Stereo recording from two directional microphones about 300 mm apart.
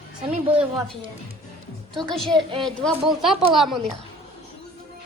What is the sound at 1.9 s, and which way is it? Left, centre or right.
Speech, centre.